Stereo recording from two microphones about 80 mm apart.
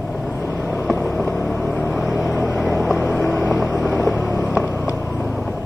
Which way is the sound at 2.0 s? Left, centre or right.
Centre.